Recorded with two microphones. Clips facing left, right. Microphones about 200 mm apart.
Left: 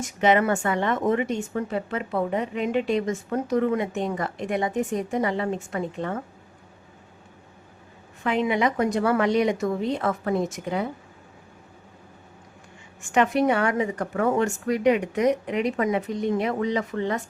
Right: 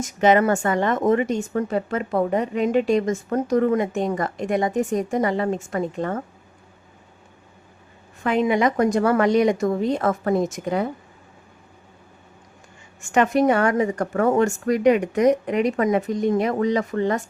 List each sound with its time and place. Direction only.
0.0 s a woman's voice: 40° right (ahead or behind)
8.2 s a woman's voice: 45° right (ahead or behind)
13.0 s a woman's voice: 45° right (ahead or behind)